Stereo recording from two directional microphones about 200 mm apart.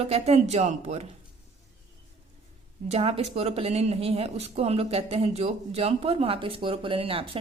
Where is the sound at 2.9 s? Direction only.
30° right (ahead or behind).